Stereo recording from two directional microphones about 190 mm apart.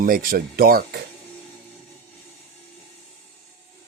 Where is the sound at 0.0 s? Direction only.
50° right (ahead or behind).